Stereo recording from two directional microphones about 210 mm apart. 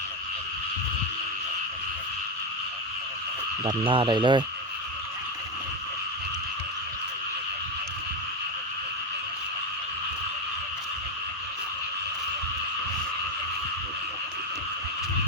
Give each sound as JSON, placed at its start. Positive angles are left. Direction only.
{"t": 3.6, "sound": "speech", "side_deg": -25}